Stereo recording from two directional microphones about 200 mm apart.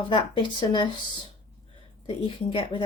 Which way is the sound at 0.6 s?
25° left (ahead or behind).